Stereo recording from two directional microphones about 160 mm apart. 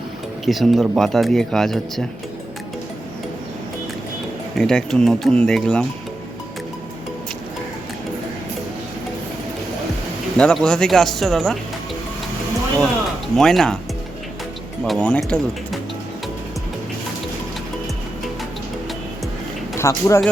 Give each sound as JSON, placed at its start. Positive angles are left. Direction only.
{"t": 0.4, "sound": "speech", "side_deg": 0}
{"t": 4.5, "sound": "speech", "side_deg": 5}
{"t": 10.3, "sound": "speech", "side_deg": 5}
{"t": 13.3, "sound": "speech", "side_deg": 0}
{"t": 14.8, "sound": "speech", "side_deg": 5}
{"t": 19.7, "sound": "speech", "side_deg": 20}